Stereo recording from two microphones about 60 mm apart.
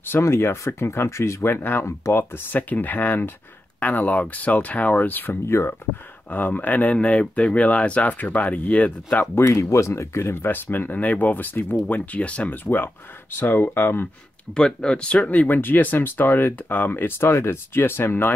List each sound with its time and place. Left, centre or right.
0.2 s speech: left
1.9 s speech: left
2.3 s speech: left
5.5 s speech: left
6.3 s speech: left
9.5 s speech: left
13.4 s speech: left
14.5 s speech: centre
15.4 s speech: left